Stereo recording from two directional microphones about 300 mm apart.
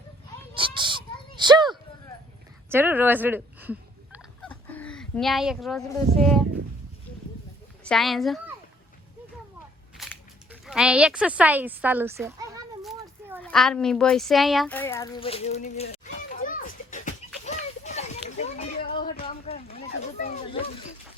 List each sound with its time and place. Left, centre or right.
0.5 s speech: centre
1.5 s a sound: centre
2.6 s turkey: centre
4.7 s speech: centre
7.9 s speech: centre
10.0 s speech: centre
12.8 s children playing: centre
13.4 s a sound: centre; by 19.2 s left
19.2 s a sound: centre
19.6 s speech: left